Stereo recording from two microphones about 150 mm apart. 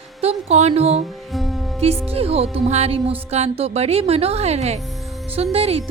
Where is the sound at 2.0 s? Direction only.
40° right (ahead or behind).